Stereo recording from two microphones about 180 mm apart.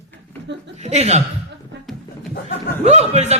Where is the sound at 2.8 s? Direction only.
35° right (ahead or behind).